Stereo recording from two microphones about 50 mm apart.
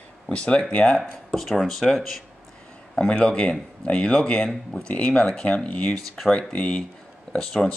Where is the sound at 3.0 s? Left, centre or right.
Left.